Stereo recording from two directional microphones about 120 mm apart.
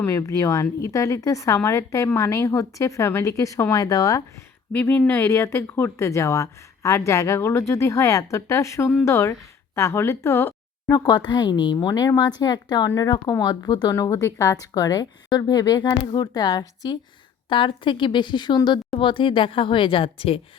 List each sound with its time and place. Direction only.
0.0 s speech: 25° left (ahead or behind)
4.7 s speech: 15° left (ahead or behind)
10.9 s a woman's voice: 35° left (ahead or behind)
13.9 s a woman's voice: 25° left (ahead or behind)
17.5 s a woman's voice: 45° left (ahead or behind)